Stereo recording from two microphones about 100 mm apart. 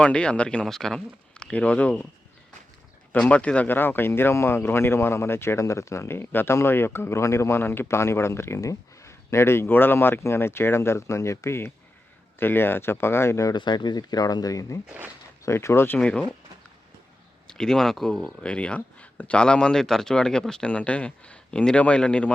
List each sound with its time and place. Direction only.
0.0 s speech: 10° left (ahead or behind)
3.1 s speech: 15° left (ahead or behind); by 13.5 s 30° left (ahead or behind)
13.5 s speech: 45° left (ahead or behind); by 16.0 s 25° left (ahead or behind)
16.0 s speech: 10° left (ahead or behind)
17.4 s speech: 5° left (ahead or behind)